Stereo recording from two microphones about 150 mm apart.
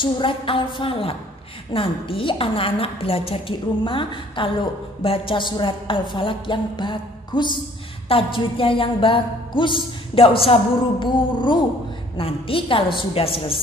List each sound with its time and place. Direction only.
0.0 s a woman's voice: 35° left (ahead or behind)